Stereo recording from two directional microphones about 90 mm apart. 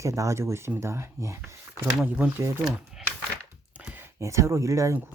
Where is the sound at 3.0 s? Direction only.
5° right (ahead or behind).